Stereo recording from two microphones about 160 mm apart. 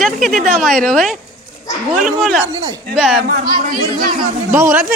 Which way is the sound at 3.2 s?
65° right (ahead or behind).